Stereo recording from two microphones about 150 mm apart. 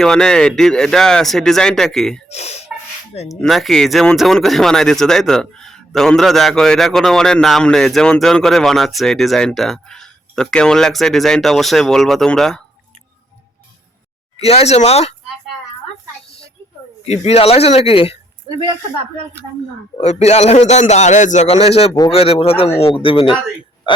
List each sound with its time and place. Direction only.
0.0 s speech: 5° left (ahead or behind)
2.3 s a man's voice: 45° left (ahead or behind)
3.4 s speech: centre (ahead or behind)
14.3 s a man's voice: 45° left (ahead or behind)
17.0 s a man's voice: 45° left (ahead or behind)
20.0 s a man's voice: 45° left (ahead or behind)